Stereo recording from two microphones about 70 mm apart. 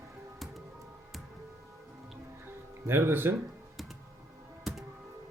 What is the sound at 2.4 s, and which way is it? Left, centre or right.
Music, right.